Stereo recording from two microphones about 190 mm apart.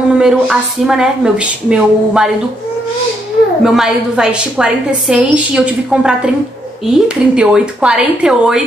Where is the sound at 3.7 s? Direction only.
Centre (ahead or behind).